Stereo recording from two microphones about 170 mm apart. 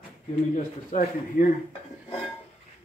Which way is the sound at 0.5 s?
45° left (ahead or behind).